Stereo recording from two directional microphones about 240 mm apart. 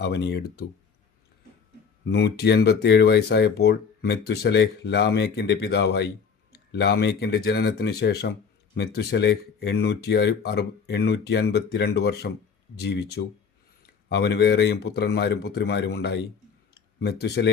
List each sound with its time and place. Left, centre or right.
0.0 s speech: left
2.0 s speech: left
16.7 s a sound: left